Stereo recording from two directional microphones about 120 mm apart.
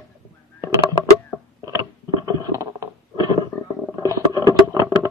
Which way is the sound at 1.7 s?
30° right (ahead or behind).